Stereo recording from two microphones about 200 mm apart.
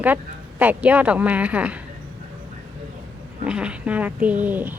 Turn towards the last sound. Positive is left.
turn(degrees=-10)  # may be behind; listen again after turning